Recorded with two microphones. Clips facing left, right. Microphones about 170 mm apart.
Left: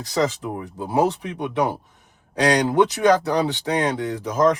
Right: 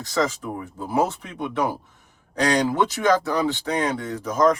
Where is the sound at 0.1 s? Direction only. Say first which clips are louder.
Left 2 dB; 15° left (ahead or behind).